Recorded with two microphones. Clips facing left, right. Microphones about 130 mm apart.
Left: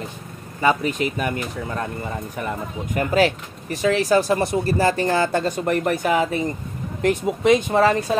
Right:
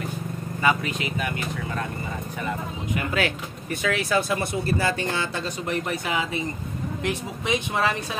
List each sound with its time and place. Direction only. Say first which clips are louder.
0.6 s speech: left 5 dB; 35° left (ahead or behind)
2.9 s speech: left 7 dB; 40° left (ahead or behind)